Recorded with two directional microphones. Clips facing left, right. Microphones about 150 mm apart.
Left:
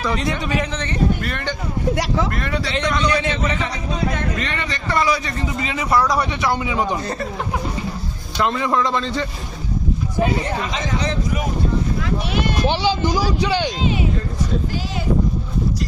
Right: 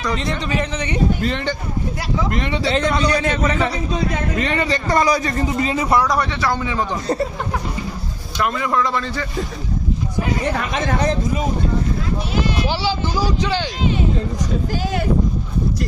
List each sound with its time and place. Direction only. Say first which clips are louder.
0.0 s a man's voice: left 1 dB; centre (ahead or behind)
2.3 s speech: right 3 dB; 20° right (ahead or behind)
2.7 s a man's voice: right 1 dB; 35° right (ahead or behind)
4.4 s a man's voice: right 6 dB; 30° right (ahead or behind)
6.4 s speech: left 1 dB; 10° left (ahead or behind)
8.4 s a man's voice: left 1 dB; 25° left (ahead or behind)
10.6 s speech: right 3 dB; 55° right (ahead or behind)
12.6 s speech: left 3 dB; 20° left (ahead or behind)